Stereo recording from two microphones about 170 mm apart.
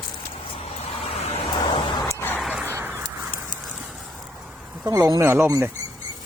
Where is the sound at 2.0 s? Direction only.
15° left (ahead or behind).